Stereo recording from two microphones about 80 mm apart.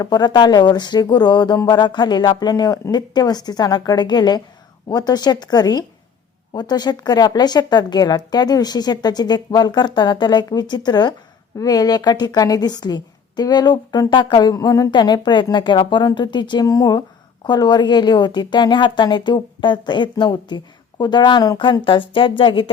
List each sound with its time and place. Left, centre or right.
0.0 s a woman's voice: left
11.5 s a woman's voice: left
14.1 s a woman's voice: left
14.5 s a woman's voice: left
14.9 s a woman's voice: left
16.6 s a woman's voice: left
17.4 s a woman's voice: left
21.6 s speech: left